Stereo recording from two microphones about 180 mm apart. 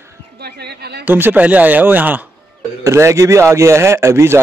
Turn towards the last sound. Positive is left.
turn(degrees=-15)  # may be behind; listen again after turning